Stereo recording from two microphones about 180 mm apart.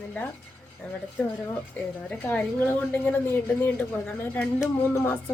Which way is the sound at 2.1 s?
10° left (ahead or behind).